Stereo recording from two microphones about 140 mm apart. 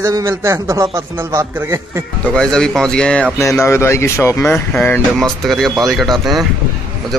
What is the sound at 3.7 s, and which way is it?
Speech, 20° left (ahead or behind).